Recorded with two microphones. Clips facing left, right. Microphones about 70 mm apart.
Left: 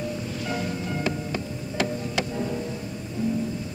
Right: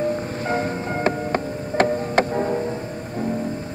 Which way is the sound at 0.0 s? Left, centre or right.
Right.